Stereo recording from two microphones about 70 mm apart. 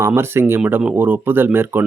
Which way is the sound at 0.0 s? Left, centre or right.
Right.